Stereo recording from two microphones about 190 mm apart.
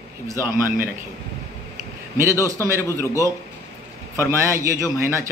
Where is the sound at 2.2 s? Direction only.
15° right (ahead or behind).